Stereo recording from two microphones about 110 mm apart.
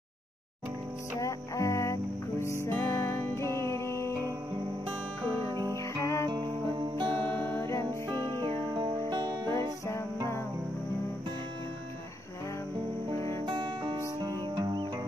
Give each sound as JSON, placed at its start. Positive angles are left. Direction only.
{"t": 1.2, "sound": "music", "side_deg": 30}
{"t": 5.5, "sound": "music", "side_deg": -40}
{"t": 5.8, "sound": "music", "side_deg": 25}
{"t": 6.3, "sound": "music", "side_deg": -45}
{"t": 7.2, "sound": "music", "side_deg": 15}
{"t": 7.9, "sound": "music", "side_deg": -35}
{"t": 9.5, "sound": "music", "side_deg": 25}
{"t": 13.5, "sound": "music", "side_deg": -45}